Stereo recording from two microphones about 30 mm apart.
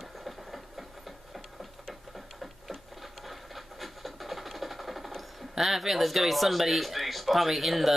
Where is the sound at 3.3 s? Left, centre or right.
Centre.